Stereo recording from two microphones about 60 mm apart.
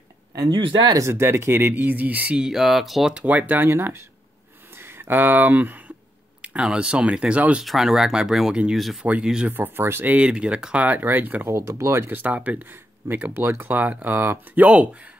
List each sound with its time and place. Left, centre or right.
0.9 s speech: right
2.3 s speech: centre
3.2 s speech: right
3.6 s speech: right
4.9 s speech: right
6.4 s speech: centre
7.6 s speech: centre
9.5 s speech: right
10.0 s speech: right
10.9 s speech: right
11.4 s speech: right
12.1 s speech: right
13.1 s speech: right